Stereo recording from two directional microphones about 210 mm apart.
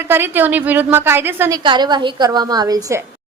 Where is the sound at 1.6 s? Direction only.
20° right (ahead or behind).